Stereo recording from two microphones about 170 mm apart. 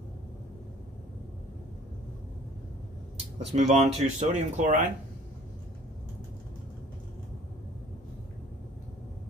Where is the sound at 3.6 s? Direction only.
40° right (ahead or behind).